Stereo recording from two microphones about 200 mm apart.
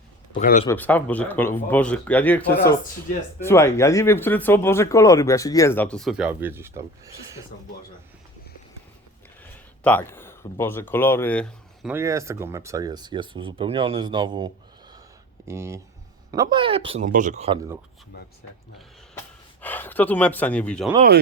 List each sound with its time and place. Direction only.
0.3 s speech: 40° left (ahead or behind)
0.7 s speech: 10° left (ahead or behind)
3.4 s speech: 15° left (ahead or behind); by 7.4 s 15° right (ahead or behind)
9.8 s speech: 10° left (ahead or behind)
11.9 s speech: 15° right (ahead or behind)
17.1 s speech: 40° right (ahead or behind)
19.6 s speech: 10° left (ahead or behind)